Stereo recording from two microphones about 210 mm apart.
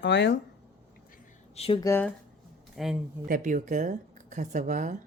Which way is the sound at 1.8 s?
15° left (ahead or behind).